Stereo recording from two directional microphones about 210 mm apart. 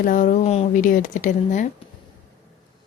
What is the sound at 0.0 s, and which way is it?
Speech, 40° left (ahead or behind).